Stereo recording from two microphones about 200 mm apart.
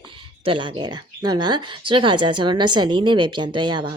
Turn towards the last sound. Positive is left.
turn(degrees=-20)  # may be behind; listen again after turning